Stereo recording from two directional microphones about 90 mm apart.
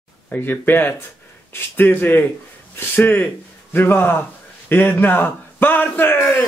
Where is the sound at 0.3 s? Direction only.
20° left (ahead or behind).